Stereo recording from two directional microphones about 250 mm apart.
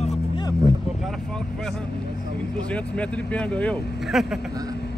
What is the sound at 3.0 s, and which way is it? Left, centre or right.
Speech, centre.